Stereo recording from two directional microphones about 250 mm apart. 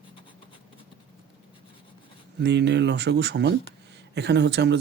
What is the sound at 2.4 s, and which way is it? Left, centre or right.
Speech, right.